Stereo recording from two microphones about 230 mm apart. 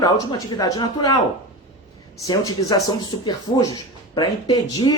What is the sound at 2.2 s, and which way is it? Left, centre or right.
Speech, centre.